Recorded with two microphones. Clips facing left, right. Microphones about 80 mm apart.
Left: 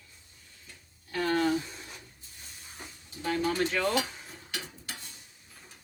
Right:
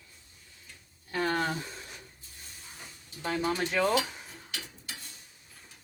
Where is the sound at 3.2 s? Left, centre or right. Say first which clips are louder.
Left 2 dB; right.